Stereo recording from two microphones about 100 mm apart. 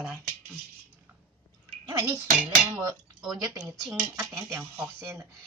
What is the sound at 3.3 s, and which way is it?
Speech, 35° right (ahead or behind).